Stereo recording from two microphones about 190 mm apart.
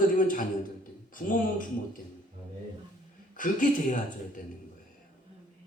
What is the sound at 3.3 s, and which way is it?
Speech, 45° left (ahead or behind).